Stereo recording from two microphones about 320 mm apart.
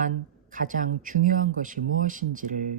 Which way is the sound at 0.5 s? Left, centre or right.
Right.